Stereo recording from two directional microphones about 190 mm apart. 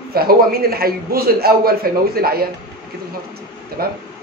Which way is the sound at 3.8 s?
50° right (ahead or behind).